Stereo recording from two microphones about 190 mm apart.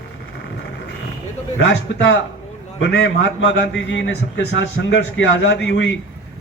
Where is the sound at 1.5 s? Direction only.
75° left (ahead or behind).